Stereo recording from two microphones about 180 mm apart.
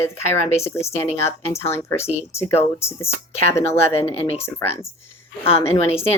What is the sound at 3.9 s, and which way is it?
Speech, 35° left (ahead or behind).